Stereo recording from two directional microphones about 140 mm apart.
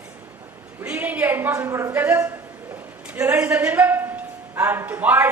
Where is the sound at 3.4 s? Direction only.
10° right (ahead or behind).